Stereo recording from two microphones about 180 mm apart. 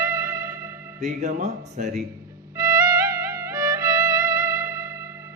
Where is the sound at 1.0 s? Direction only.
40° right (ahead or behind).